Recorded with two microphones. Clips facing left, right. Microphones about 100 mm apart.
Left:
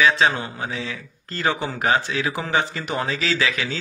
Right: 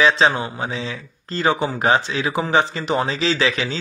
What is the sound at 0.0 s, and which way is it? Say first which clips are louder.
A man's voice: right 2 dB; 20° right (ahead or behind).